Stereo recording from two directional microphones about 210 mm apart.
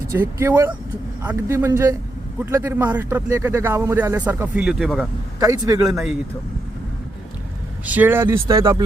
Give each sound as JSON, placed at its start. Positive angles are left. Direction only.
{"t": 0.1, "sound": "speech", "side_deg": -10}
{"t": 5.4, "sound": "speech", "side_deg": -15}
{"t": 5.8, "sound": "speech", "side_deg": 0}
{"t": 7.9, "sound": "speech", "side_deg": -10}